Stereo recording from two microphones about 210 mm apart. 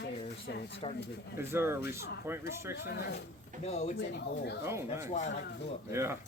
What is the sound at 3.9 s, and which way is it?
Speech, 55° left (ahead or behind).